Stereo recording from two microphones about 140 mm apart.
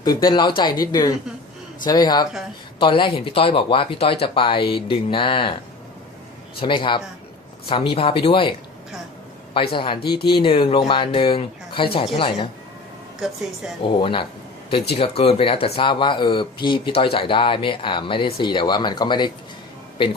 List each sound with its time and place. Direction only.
0.0 s speech: 30° left (ahead or behind)
6.6 s speech: 35° left (ahead or behind)
9.6 s speech: 35° left (ahead or behind)
13.2 s speech: 5° right (ahead or behind)
13.8 s speech: 35° left (ahead or behind)